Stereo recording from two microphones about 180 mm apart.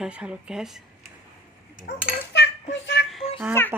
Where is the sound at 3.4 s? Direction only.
15° right (ahead or behind).